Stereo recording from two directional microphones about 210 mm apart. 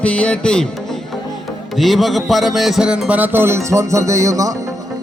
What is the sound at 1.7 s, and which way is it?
Music, centre (ahead or behind).